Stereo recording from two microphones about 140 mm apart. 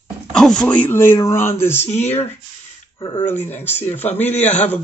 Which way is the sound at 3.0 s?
25° left (ahead or behind).